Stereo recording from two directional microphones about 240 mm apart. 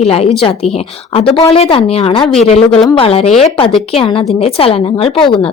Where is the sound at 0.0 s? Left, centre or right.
Left.